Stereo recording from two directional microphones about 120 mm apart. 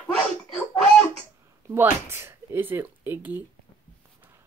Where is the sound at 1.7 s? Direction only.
20° right (ahead or behind).